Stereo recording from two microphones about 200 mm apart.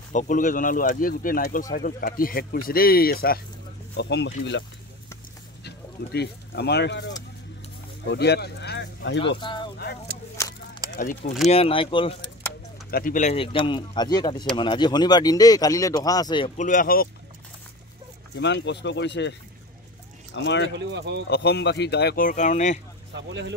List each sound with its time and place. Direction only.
0.1 s speech: 40° left (ahead or behind); by 9.2 s 60° left (ahead or behind)
9.4 s speech: 25° left (ahead or behind)
10.3 s a sound: 15° left (ahead or behind)
11.0 s speech: 40° left (ahead or behind)
11.4 s speech: 30° left (ahead or behind)
12.9 s speech: 40° left (ahead or behind); by 16.5 s 20° left (ahead or behind)
16.5 s speech: 40° left (ahead or behind)
18.3 s speech: 60° left (ahead or behind)
20.3 s speech: 65° left (ahead or behind)
20.7 s speech: 60° right (ahead or behind)
21.3 s speech: 60° left (ahead or behind); by 22.8 s 35° left (ahead or behind)
23.1 s speech: 65° right (ahead or behind)